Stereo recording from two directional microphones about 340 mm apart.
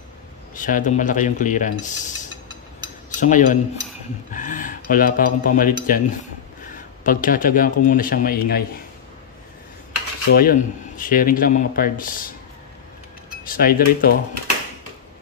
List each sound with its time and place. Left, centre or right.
0.6 s speech: left
3.2 s speech: left
10.3 s speech: left
13.5 s speech: left